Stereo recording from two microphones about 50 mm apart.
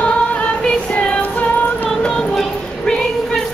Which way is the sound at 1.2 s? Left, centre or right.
Left.